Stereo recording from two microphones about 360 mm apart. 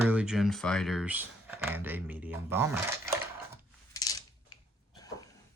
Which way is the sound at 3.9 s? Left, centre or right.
Centre.